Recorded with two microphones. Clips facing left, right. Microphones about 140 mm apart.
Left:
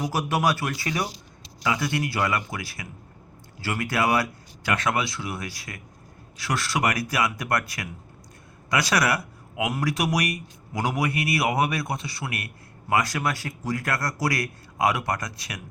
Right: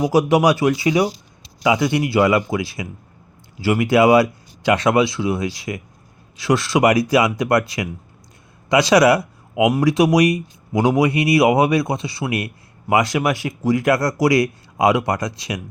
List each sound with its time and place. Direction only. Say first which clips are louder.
0.0 s speech: right 9 dB; 15° right (ahead or behind)
9.6 s speech: right 11 dB; 15° right (ahead or behind)